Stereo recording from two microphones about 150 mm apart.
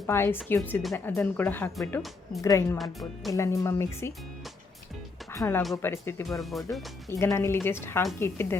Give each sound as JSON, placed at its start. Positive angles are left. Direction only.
{"t": 0.1, "sound": "a woman's voice", "side_deg": 15}
{"t": 2.0, "sound": "speech", "side_deg": 0}
{"t": 2.4, "sound": "speech", "side_deg": 20}
{"t": 2.7, "sound": "speech", "side_deg": 0}
{"t": 3.3, "sound": "speech", "side_deg": 20}
{"t": 5.3, "sound": "a woman's voice", "side_deg": 15}
{"t": 6.2, "sound": "speech", "side_deg": 0}
{"t": 7.1, "sound": "a woman's voice", "side_deg": 20}